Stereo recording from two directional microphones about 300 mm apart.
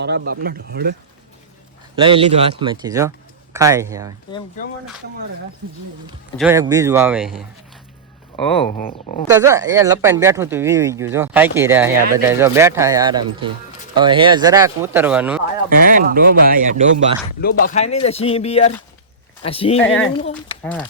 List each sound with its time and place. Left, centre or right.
0.0 s speech: right
2.0 s speech: centre
4.6 s speech: left
6.3 s speech: centre
8.8 s speech: left
9.2 s speech: centre
15.8 s speech: right
17.4 s speech: left